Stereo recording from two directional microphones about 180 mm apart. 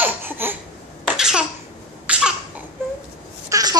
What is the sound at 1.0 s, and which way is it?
Cough, 5° right (ahead or behind).